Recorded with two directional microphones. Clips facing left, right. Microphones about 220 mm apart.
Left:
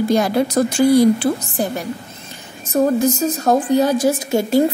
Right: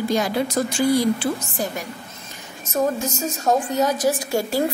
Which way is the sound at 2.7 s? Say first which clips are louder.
Left 7 dB; 35° left (ahead or behind).